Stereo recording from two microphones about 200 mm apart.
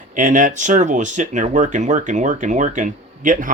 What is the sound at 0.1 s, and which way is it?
Speech, 40° right (ahead or behind).